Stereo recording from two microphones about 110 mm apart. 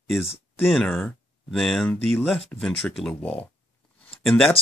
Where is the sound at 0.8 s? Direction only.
15° left (ahead or behind).